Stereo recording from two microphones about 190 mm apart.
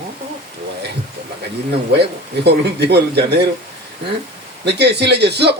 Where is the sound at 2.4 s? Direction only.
60° right (ahead or behind).